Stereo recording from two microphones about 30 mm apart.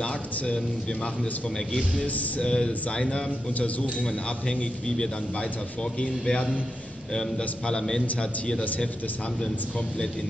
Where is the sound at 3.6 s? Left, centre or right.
Left.